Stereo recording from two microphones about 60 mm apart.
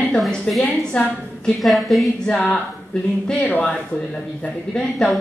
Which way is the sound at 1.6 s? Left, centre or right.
Centre.